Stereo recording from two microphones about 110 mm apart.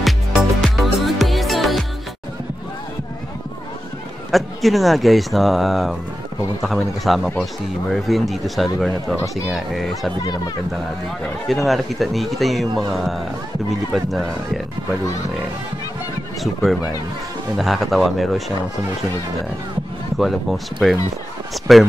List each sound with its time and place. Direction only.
0.0 s music: centre (ahead or behind)
4.3 s speech: centre (ahead or behind)
10.2 s speech: 35° left (ahead or behind)
11.4 s speech: centre (ahead or behind)
17.6 s speech: centre (ahead or behind)
20.2 s speech: centre (ahead or behind)